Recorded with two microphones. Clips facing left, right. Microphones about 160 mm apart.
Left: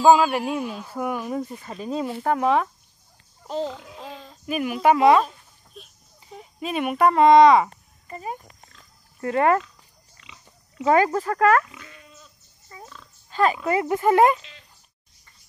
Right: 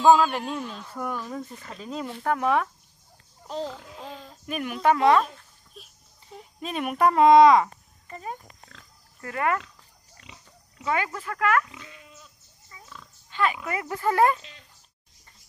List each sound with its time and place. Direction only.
0.0 s speech: 5° left (ahead or behind)
3.4 s speech: centre (ahead or behind)
6.3 s speech: 5° left (ahead or behind)
7.6 s a sound: 10° left (ahead or behind)
9.2 s speech: 30° left (ahead or behind)
10.3 s pig: 50° right (ahead or behind)
10.9 s speech: 40° left (ahead or behind)
11.7 s pig: 15° right (ahead or behind)
12.7 s pig: 45° left (ahead or behind)
13.3 s speech: 40° left (ahead or behind); by 14.4 s 20° left (ahead or behind)